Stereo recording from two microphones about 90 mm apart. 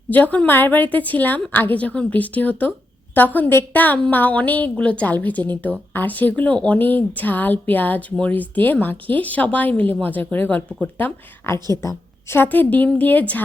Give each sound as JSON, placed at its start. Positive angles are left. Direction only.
{"t": 0.1, "sound": "a woman's voice", "side_deg": 15}